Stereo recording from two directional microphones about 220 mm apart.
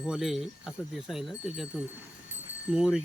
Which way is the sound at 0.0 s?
Centre (ahead or behind).